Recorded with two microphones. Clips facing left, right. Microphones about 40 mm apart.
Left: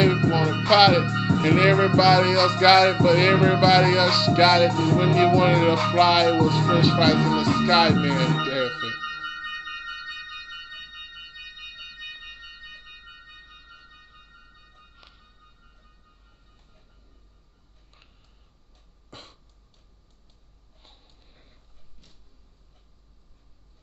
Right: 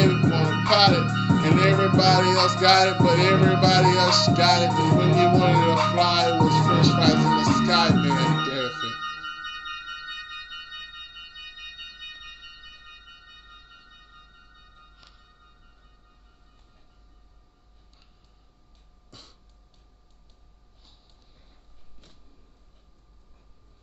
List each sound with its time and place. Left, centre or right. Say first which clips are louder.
0.0 s music: left 1 dB; centre
8.9 s music: left 1 dB; centre
10.7 s music: even; centre
12.1 s organ: left 2 dB; centre
15.0 s music: left 1 dB; centre
19.0 s throat clearing: left 5 dB; left
20.8 s a sound: left 3 dB; left